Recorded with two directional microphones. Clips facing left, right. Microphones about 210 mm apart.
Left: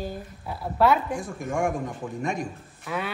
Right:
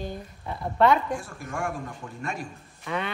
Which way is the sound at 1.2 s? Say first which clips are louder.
Left 6 dB; 15° left (ahead or behind).